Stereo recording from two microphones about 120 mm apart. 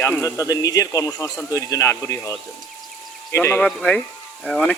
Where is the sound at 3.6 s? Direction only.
5° left (ahead or behind).